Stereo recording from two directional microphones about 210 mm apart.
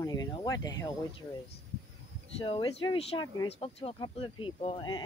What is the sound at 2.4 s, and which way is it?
Speech, 25° left (ahead or behind).